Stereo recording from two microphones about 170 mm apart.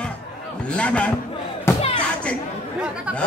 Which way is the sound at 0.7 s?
5° left (ahead or behind).